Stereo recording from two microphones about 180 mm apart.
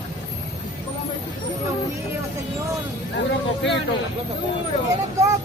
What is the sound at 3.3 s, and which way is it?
Speech, 80° left.